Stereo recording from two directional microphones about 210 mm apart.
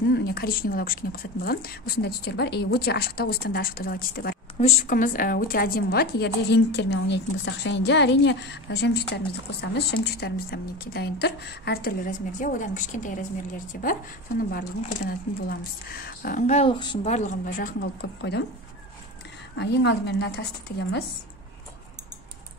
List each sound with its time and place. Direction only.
0.1 s a woman's voice: 45° left (ahead or behind)
4.6 s a woman's voice: 30° left (ahead or behind)
14.5 s a woman's voice: 45° left (ahead or behind)
17.7 s speech: 55° left (ahead or behind)
19.5 s a woman's voice: 55° left (ahead or behind)